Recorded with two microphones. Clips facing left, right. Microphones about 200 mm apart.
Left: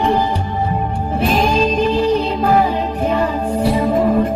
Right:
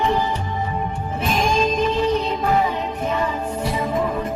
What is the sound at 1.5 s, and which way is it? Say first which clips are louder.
Music: left 4 dB; 30° left (ahead or behind).